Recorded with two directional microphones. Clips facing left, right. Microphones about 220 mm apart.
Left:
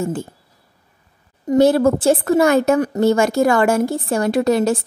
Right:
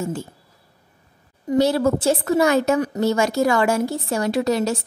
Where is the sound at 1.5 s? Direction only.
50° left (ahead or behind).